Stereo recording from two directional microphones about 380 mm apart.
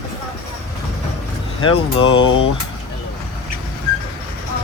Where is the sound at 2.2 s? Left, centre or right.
Left.